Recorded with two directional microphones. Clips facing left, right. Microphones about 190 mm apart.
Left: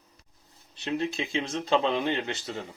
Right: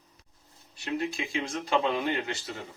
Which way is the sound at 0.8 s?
25° left (ahead or behind).